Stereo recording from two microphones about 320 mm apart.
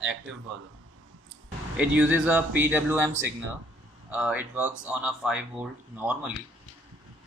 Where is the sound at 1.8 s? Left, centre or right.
Centre.